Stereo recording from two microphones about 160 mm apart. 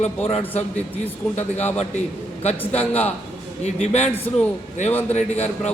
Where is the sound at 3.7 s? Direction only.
45° left (ahead or behind).